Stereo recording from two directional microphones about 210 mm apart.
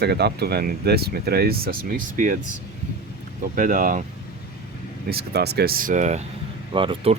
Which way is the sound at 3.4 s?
40° right (ahead or behind).